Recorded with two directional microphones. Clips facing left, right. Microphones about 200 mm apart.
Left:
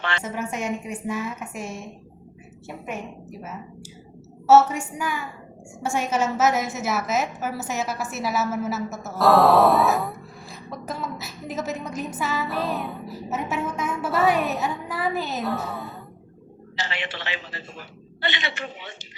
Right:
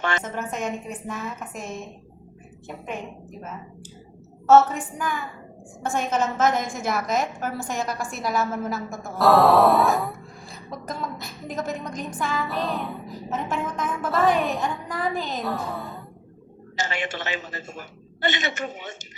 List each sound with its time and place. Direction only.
0.0 s a woman's voice: 45° right (ahead or behind)
0.3 s a woman's voice: 10° left (ahead or behind)
16.7 s a woman's voice: 45° right (ahead or behind)